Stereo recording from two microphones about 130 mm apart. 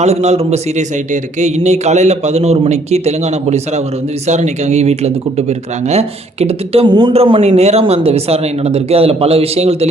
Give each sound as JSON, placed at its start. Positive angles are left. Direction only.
{"t": 0.0, "sound": "a man's voice", "side_deg": -55}
{"t": 6.8, "sound": "a man's voice", "side_deg": -35}
{"t": 7.4, "sound": "speech", "side_deg": -55}